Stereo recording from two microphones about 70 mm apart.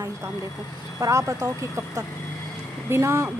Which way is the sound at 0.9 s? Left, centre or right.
Right.